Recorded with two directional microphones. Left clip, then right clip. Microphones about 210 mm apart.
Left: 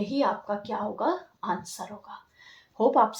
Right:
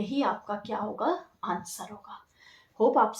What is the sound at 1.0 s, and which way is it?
Speech, 30° left (ahead or behind).